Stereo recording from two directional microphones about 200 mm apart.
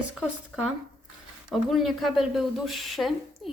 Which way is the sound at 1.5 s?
Centre (ahead or behind).